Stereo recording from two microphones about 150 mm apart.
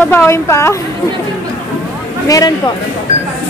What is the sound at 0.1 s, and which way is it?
Speech, 15° left (ahead or behind).